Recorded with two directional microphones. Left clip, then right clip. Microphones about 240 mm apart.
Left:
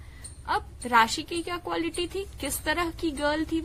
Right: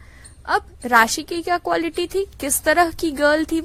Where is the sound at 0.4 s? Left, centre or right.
Right.